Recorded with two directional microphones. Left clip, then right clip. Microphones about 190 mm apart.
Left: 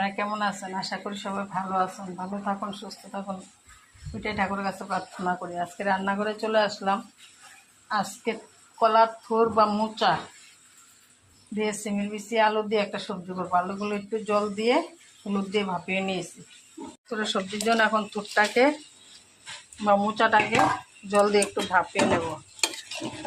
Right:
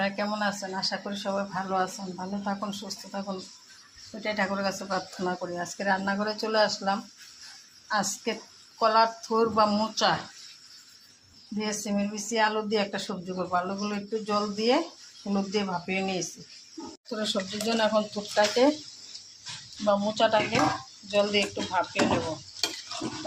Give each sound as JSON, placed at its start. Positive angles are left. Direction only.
{"t": 0.0, "sound": "speech", "side_deg": 15}
{"t": 4.2, "sound": "speech", "side_deg": 15}
{"t": 11.5, "sound": "speech", "side_deg": 20}
{"t": 19.8, "sound": "speech", "side_deg": 15}